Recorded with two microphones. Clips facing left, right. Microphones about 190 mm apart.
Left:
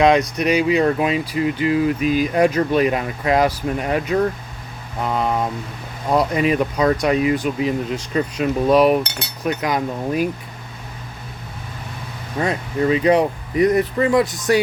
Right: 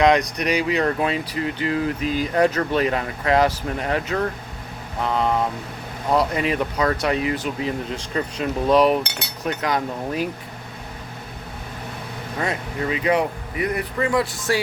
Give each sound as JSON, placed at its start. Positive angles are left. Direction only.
{"t": 0.3, "sound": "speech", "side_deg": 20}
{"t": 12.4, "sound": "speech", "side_deg": 25}
{"t": 13.6, "sound": "speech", "side_deg": 35}
{"t": 14.1, "sound": "speech", "side_deg": 20}